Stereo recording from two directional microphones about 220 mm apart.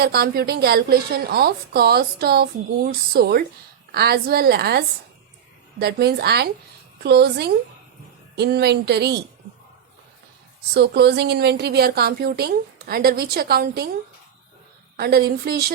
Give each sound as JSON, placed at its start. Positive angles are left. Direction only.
{"t": 0.0, "sound": "a woman's voice", "side_deg": -45}
{"t": 10.8, "sound": "a woman's voice", "side_deg": -50}
{"t": 14.9, "sound": "a woman's voice", "side_deg": -45}